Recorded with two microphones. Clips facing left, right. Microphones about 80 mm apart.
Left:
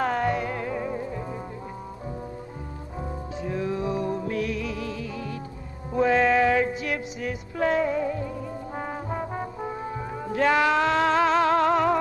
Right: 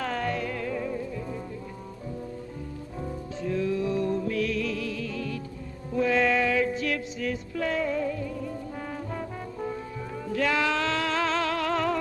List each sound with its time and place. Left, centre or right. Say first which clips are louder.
0.0 s music: left 5 dB; left
3.0 s music: left 1 dB; left
7.5 s music: left 6 dB; left